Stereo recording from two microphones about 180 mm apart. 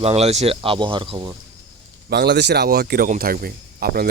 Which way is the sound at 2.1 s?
65° right (ahead or behind).